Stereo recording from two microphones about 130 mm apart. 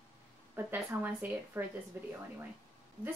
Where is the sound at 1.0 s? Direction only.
10° right (ahead or behind).